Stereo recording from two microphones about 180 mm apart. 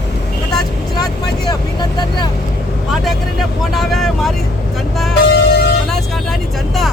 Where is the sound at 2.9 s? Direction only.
Centre (ahead or behind).